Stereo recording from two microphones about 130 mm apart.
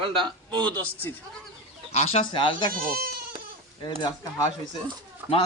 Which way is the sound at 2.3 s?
40° left (ahead or behind).